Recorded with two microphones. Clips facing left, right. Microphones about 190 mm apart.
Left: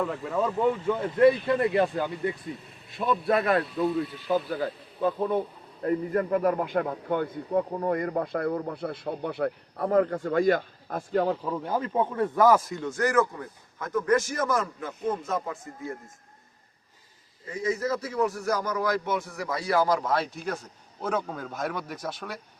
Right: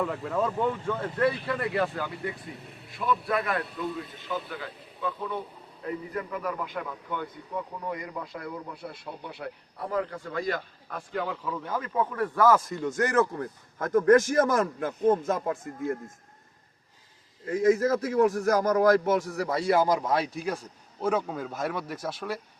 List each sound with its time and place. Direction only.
0.0 s speech: centre (ahead or behind)
0.9 s a man's voice: 15° left (ahead or behind)
12.6 s speech: centre (ahead or behind)
13.1 s a man's voice: 45° right (ahead or behind)
17.4 s a man's voice: 50° right (ahead or behind); by 22.4 s centre (ahead or behind)